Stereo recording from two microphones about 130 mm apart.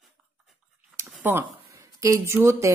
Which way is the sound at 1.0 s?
15° right (ahead or behind).